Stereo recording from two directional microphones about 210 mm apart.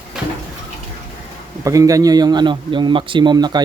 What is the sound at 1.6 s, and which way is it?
A man's voice, 15° right (ahead or behind).